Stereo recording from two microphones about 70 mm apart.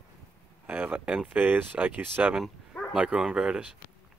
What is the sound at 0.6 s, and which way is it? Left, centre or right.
Speech, right.